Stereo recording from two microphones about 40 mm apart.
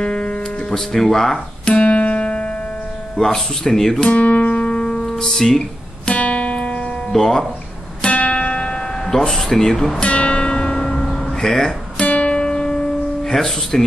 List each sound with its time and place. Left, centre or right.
0.0 s music: left
0.7 s speech: centre
1.7 s music: left
3.2 s speech: centre
4.1 s guitar: left
4.6 s music: centre
6.0 s music: left
7.1 s speech: centre
8.1 s music: left
9.1 s speech: centre
10.0 s music: left
11.1 s music: centre
12.0 s music: left
12.4 s music: left